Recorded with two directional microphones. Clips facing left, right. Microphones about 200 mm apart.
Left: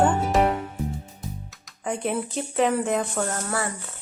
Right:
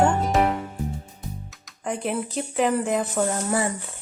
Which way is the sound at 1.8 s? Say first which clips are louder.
Even; centre (ahead or behind).